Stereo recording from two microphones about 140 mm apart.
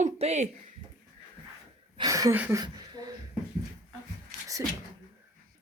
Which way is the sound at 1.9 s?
25° right (ahead or behind).